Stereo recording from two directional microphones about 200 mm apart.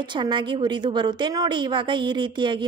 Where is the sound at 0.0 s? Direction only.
25° right (ahead or behind).